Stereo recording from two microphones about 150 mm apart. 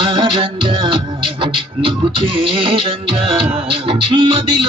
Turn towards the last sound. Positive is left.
turn(degrees=-35)  # may be behind; listen again after turning